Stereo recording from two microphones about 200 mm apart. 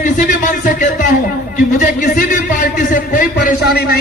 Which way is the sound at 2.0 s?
40° left (ahead or behind).